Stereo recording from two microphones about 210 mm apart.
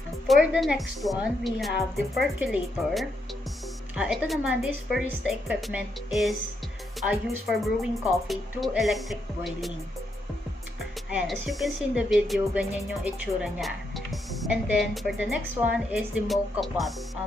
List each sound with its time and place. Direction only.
0.3 s a woman's voice: centre (ahead or behind)
11.1 s a woman's voice: 5° right (ahead or behind)